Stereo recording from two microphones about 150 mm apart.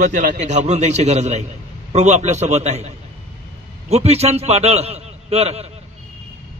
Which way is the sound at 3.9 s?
45° right (ahead or behind).